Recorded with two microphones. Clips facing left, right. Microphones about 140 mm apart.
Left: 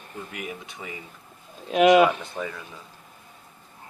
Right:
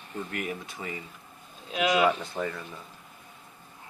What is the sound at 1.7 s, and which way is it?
Speech, 55° left (ahead or behind).